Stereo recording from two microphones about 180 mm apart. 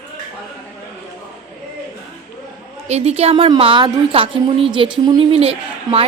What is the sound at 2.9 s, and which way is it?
A woman's voice, 35° right (ahead or behind).